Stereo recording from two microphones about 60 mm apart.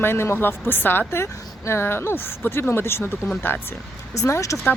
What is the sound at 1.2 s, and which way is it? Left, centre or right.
Speech, left.